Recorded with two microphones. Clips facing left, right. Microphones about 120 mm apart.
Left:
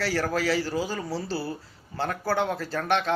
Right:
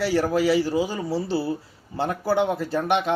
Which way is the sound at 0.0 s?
20° right (ahead or behind).